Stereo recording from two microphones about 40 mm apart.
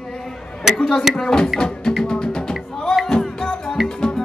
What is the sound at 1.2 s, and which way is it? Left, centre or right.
Music, centre.